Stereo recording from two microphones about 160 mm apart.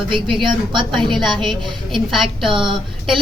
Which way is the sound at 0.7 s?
30° right (ahead or behind).